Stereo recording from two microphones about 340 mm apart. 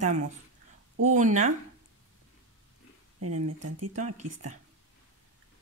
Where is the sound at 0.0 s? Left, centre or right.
Right.